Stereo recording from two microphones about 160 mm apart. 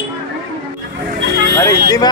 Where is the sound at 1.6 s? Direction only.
20° left (ahead or behind).